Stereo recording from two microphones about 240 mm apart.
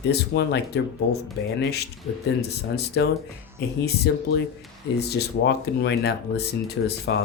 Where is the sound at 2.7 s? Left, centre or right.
Left.